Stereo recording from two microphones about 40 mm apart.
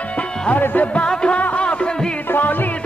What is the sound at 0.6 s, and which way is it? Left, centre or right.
Music, left.